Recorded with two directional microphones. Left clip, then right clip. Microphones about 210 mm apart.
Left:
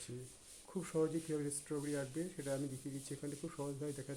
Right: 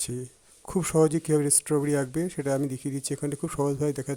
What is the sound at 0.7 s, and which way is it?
Speech, 55° right (ahead or behind).